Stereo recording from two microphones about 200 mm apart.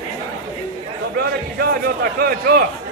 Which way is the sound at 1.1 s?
50° right (ahead or behind).